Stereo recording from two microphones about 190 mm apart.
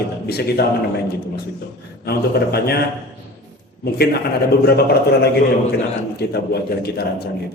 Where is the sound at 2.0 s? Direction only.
55° left (ahead or behind).